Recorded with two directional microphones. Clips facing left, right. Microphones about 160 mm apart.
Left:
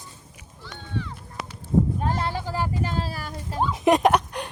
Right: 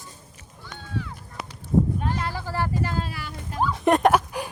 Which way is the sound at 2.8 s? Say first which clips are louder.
Even; 25° left (ahead or behind).